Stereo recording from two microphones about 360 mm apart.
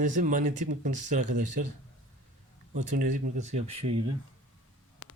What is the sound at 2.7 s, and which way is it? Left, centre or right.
Speech, right.